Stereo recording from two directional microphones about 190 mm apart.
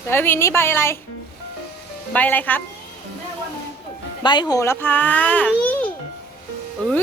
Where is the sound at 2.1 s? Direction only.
10° left (ahead or behind).